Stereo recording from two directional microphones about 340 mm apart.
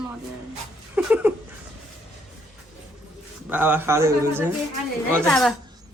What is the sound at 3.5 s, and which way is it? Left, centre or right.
A woman's voice, centre.